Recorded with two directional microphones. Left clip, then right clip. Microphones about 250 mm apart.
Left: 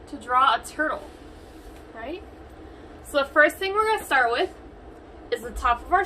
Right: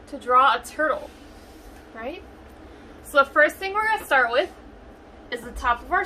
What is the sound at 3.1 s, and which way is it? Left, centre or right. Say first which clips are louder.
A woman's voice: right 1 dB; centre.